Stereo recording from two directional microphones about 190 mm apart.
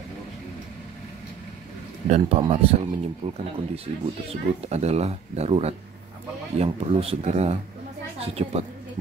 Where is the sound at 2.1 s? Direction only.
35° right (ahead or behind).